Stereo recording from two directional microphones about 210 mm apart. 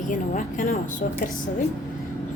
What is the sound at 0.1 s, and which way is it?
Speech, 40° left (ahead or behind).